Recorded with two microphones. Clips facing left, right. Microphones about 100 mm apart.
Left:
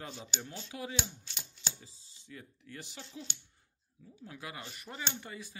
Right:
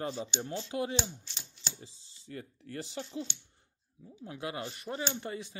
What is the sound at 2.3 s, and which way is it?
Speech, 45° right (ahead or behind).